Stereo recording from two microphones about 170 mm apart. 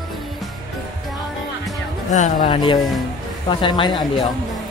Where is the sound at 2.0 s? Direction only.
45° left (ahead or behind).